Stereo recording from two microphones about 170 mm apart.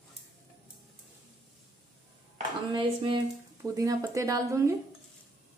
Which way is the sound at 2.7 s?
30° right (ahead or behind).